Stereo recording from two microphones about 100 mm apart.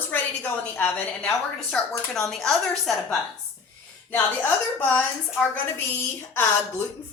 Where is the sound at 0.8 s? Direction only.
10° left (ahead or behind).